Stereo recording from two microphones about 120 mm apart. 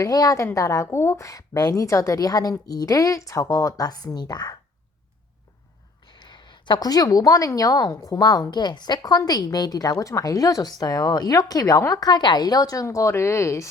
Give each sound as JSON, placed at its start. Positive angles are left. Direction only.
{"t": 0.0, "sound": "a woman's voice", "side_deg": 30}
{"t": 6.1, "sound": "a woman's voice", "side_deg": 40}